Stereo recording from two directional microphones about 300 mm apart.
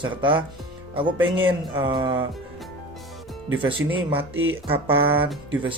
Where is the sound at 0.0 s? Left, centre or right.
Centre.